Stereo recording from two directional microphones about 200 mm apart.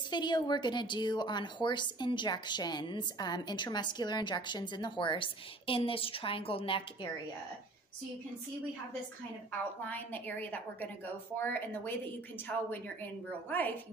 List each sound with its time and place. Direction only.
0.1 s speech: 20° left (ahead or behind)
9.8 s a woman's voice: 10° left (ahead or behind)